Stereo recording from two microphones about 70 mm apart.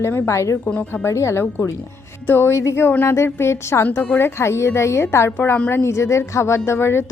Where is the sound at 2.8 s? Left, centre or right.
Left.